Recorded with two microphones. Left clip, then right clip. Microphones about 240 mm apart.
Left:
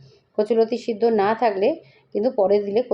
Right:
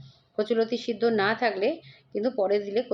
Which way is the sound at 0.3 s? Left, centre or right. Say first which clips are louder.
Left 6 dB; centre.